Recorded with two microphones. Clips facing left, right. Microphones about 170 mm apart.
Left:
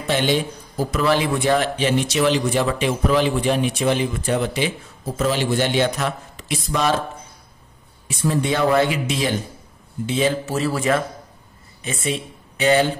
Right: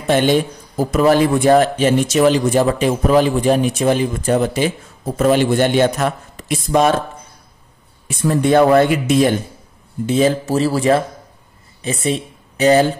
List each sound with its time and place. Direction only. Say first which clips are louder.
0.0 s a man's voice: right 6 dB; 50° right (ahead or behind)
8.2 s a man's voice: right 7 dB; 50° right (ahead or behind)